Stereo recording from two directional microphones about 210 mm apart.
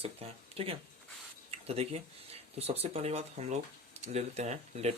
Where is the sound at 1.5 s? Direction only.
30° right (ahead or behind).